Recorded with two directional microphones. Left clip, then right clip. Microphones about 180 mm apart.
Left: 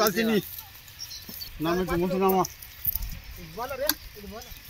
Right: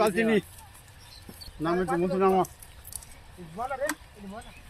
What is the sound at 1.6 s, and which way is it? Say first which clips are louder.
Speech: even; 50° left (ahead or behind).